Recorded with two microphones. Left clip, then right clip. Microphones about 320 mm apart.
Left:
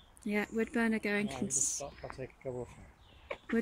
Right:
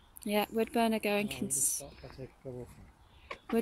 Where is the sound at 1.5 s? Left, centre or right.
Left.